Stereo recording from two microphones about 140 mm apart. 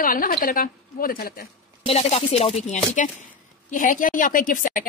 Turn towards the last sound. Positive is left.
turn(degrees=75)  # may be behind; listen again after turning